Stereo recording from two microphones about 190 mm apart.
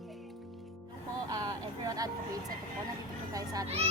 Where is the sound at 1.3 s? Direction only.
20° right (ahead or behind).